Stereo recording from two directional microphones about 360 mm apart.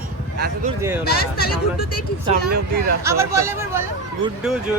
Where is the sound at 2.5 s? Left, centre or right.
Right.